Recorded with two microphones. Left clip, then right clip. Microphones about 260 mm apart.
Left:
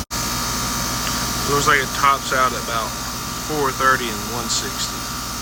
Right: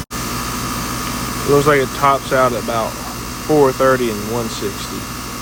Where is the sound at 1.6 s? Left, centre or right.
Centre.